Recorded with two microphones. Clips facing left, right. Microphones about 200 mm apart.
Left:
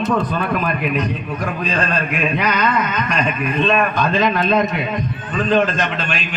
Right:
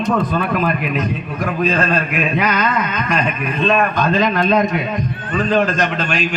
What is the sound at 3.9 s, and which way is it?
A man's voice, 45° right (ahead or behind).